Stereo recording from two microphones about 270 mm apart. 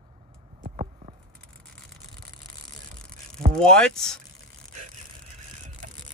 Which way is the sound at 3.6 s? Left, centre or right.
Centre.